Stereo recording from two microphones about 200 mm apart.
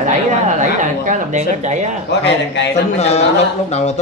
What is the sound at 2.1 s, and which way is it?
Speech, 60° left (ahead or behind).